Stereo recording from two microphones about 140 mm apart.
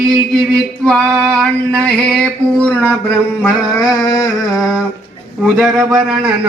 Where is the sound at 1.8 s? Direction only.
5° left (ahead or behind).